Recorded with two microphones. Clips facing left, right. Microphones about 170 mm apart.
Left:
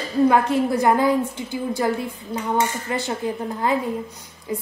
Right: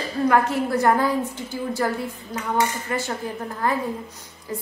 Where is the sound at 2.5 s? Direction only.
20° left (ahead or behind).